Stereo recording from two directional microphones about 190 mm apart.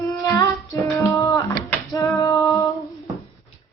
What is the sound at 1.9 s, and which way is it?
Female singing, 15° left (ahead or behind).